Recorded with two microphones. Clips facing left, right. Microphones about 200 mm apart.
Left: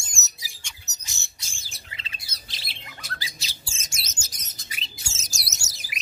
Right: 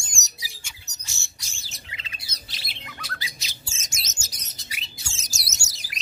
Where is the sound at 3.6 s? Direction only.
30° left (ahead or behind).